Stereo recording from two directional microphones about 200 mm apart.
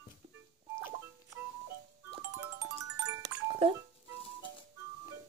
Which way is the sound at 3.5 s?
25° right (ahead or behind).